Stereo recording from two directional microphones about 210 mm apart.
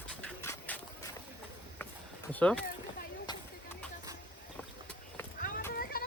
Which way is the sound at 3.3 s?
20° left (ahead or behind).